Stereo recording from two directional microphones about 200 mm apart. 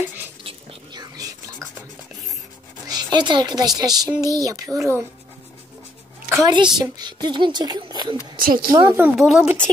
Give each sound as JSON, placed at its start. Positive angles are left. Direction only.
{"t": 0.4, "sound": "whispering", "side_deg": -25}
{"t": 2.9, "sound": "a woman's voice", "side_deg": -20}
{"t": 6.3, "sound": "a child's voice", "side_deg": -20}
{"t": 8.4, "sound": "a woman's voice", "side_deg": -45}
{"t": 8.9, "sound": "speech", "side_deg": -5}